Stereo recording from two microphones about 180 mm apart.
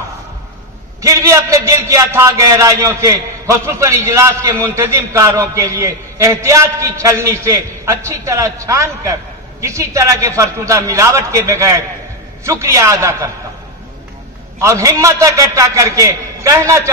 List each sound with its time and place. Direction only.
1.0 s a man's voice: 15° right (ahead or behind)
14.6 s a man's voice: 20° right (ahead or behind)